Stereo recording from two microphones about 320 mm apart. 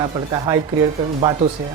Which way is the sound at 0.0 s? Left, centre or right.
Centre.